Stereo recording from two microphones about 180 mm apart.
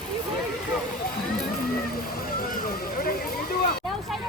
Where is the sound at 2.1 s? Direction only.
55° left (ahead or behind).